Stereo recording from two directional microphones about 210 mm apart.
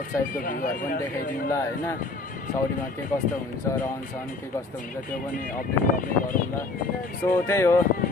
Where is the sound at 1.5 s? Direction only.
15° left (ahead or behind).